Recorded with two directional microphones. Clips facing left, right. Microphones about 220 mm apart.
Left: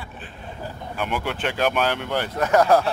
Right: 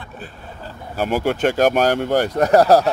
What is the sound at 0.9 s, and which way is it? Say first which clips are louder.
Speech: right 8 dB; 40° right (ahead or behind).